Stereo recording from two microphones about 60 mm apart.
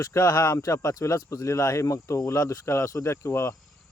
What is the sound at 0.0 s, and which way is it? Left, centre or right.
Speech, left.